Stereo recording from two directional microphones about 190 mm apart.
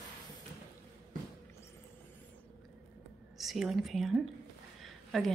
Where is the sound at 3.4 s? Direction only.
Centre (ahead or behind).